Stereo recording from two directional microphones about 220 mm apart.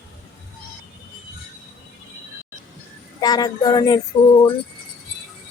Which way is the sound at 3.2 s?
15° left (ahead or behind).